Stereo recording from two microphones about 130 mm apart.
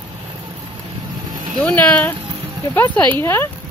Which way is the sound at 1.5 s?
10° left (ahead or behind).